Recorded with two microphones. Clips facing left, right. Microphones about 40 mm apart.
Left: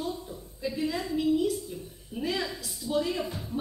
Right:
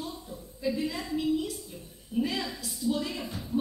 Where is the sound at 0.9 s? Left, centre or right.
Centre.